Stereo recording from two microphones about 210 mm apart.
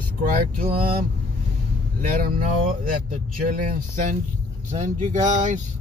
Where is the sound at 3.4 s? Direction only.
40° right (ahead or behind).